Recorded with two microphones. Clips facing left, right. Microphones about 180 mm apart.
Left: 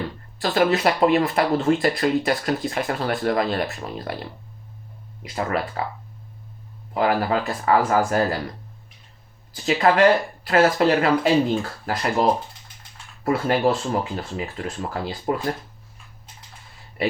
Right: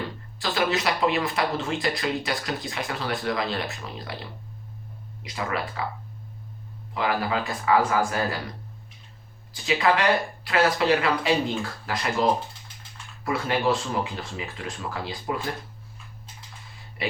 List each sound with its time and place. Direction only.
0.4 s speech: 55° left (ahead or behind)
5.3 s speech: 45° left (ahead or behind)
6.9 s speech: 45° left (ahead or behind)
9.6 s speech: 45° left (ahead or behind)
13.2 s speech: 45° left (ahead or behind)